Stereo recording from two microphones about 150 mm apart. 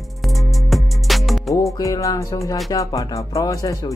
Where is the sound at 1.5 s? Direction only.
20° left (ahead or behind).